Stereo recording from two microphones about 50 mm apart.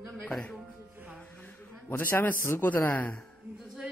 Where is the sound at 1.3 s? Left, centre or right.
Left.